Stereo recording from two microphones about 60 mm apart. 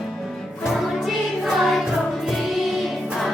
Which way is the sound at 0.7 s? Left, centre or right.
Centre.